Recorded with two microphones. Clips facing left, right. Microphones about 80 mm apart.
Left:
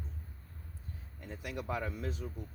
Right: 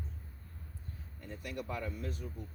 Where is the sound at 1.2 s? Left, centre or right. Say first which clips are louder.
Left 2 dB; left.